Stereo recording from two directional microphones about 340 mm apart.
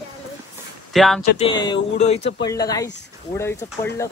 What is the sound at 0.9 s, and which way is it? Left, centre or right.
Speech, centre.